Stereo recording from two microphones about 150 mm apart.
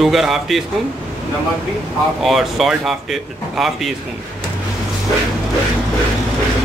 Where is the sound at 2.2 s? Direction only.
Centre (ahead or behind).